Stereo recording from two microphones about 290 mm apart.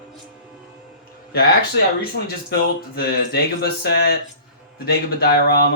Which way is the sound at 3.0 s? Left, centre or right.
Left.